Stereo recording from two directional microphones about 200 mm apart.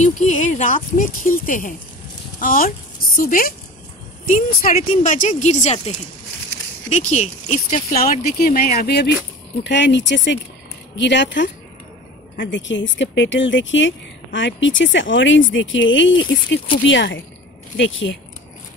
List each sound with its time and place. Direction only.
0.0 s speech: 35° left (ahead or behind)
4.6 s speech: 40° left (ahead or behind)
7.9 s speech: 50° left (ahead or behind); by 18.1 s 70° left (ahead or behind)